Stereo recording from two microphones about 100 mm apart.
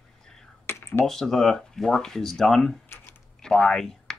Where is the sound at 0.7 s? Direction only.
25° left (ahead or behind).